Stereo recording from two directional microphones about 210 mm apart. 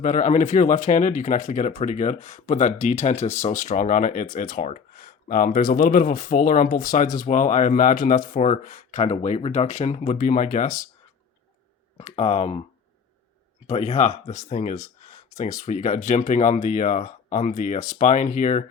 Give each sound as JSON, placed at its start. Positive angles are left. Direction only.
{"t": 0.0, "sound": "speech", "side_deg": 35}
{"t": 11.9, "sound": "speech", "side_deg": 30}
{"t": 13.7, "sound": "speech", "side_deg": 30}
{"t": 15.0, "sound": "a sound", "side_deg": 30}
{"t": 15.5, "sound": "speech", "side_deg": 35}